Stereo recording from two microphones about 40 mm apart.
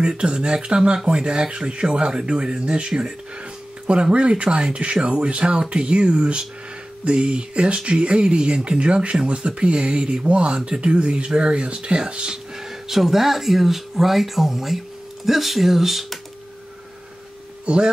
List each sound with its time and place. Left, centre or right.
0.0 s speech: right
12.5 s speech: centre
17.7 s speech: right